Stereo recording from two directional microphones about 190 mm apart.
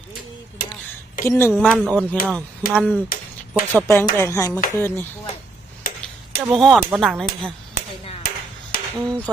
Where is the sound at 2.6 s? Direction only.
45° left (ahead or behind).